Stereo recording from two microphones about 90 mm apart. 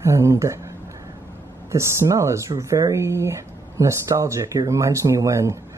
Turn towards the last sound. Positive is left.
turn(degrees=-35)  # may be behind; listen again after turning